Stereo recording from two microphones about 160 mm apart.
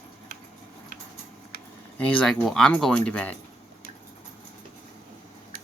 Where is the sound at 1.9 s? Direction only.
10° left (ahead or behind).